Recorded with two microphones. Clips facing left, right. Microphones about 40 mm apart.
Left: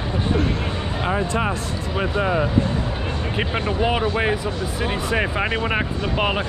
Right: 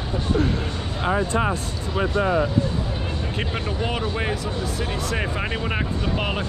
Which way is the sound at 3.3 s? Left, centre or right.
Centre.